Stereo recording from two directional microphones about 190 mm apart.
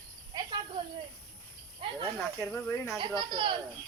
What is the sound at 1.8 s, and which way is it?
Snake, 30° right (ahead or behind).